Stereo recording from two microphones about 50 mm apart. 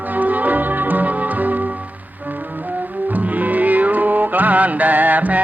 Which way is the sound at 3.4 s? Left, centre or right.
Right.